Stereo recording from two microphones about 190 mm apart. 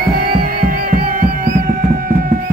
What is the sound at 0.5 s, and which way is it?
Music, 50° right (ahead or behind).